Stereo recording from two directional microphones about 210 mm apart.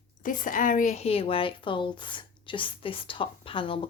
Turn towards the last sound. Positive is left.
turn(degrees=25)  # may be behind; listen again after turning